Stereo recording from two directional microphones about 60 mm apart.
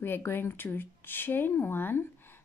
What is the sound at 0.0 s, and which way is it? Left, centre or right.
Speech, left.